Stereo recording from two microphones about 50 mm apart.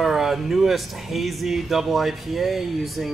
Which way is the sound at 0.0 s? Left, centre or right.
Centre.